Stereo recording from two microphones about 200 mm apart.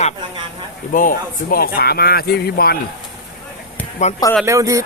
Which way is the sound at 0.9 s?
45° left (ahead or behind).